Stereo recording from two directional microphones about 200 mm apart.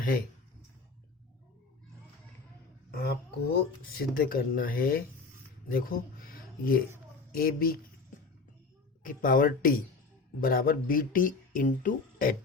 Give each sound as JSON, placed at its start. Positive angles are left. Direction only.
{"t": 2.9, "sound": "speech", "side_deg": 50}
{"t": 9.0, "sound": "speech", "side_deg": 45}